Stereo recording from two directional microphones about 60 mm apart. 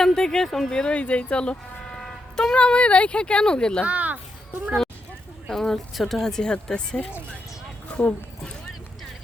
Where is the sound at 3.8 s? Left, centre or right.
Right.